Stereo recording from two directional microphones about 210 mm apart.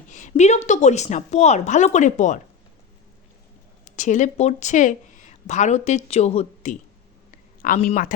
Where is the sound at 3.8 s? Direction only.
35° left (ahead or behind).